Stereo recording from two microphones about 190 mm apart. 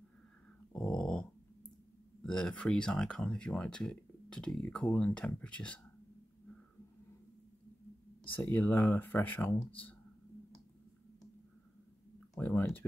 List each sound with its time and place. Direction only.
0.7 s dog: centre (ahead or behind)
2.2 s speech: 5° left (ahead or behind)
8.2 s speech: 10° left (ahead or behind)
9.6 s speech: 30° left (ahead or behind)
12.4 s speech: 10° left (ahead or behind)